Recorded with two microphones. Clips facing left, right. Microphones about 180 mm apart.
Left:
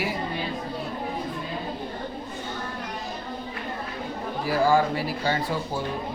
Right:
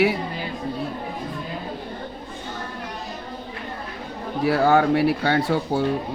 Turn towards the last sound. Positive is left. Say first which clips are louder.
# right 6 dB
turn(degrees=-70)  # may be behind; listen again after turning